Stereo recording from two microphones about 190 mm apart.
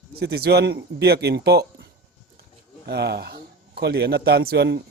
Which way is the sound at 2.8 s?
60° right (ahead or behind).